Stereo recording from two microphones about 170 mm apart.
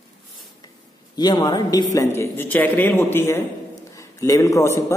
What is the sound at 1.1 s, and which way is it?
A man's voice, 25° left (ahead or behind).